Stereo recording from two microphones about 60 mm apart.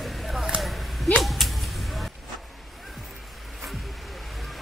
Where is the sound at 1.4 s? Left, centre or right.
Centre.